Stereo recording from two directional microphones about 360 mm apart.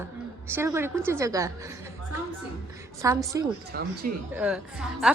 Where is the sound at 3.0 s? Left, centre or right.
Centre.